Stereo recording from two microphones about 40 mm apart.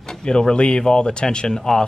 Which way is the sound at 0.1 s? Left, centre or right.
Centre.